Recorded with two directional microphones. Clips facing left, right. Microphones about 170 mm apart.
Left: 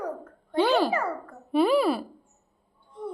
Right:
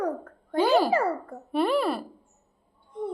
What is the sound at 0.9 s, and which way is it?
Speech, 35° right (ahead or behind).